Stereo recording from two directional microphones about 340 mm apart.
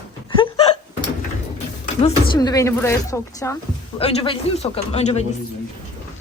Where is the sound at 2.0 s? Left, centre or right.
Centre.